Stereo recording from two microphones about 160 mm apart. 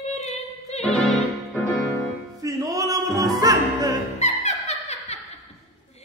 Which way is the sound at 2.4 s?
20° right (ahead or behind).